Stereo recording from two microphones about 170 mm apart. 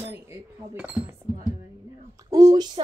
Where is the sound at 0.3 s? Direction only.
10° right (ahead or behind).